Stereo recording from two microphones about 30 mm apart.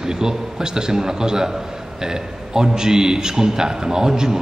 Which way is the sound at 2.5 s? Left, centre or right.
Right.